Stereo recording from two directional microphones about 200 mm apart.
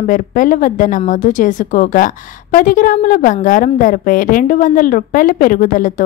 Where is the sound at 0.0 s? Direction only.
40° left (ahead or behind).